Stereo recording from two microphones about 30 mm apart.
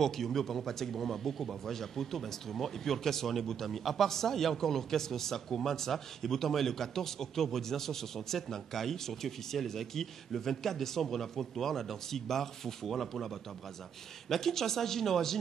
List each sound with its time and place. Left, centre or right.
0.0 s speech: centre